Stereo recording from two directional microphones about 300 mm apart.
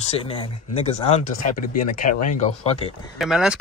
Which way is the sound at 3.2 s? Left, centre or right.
Centre.